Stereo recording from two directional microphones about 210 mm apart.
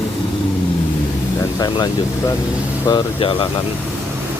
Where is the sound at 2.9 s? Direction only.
20° left (ahead or behind).